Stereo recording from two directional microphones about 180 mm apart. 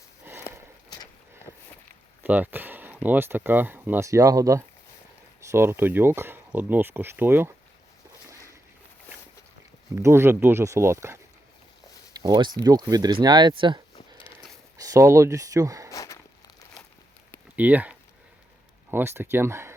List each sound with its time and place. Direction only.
2.2 s speech: 10° right (ahead or behind)
9.9 s speech: 15° right (ahead or behind)
12.1 s a sound: 20° right (ahead or behind)
12.6 s speech: 20° right (ahead or behind)
15.9 s a sound: 20° left (ahead or behind)
17.6 s speech: 10° right (ahead or behind)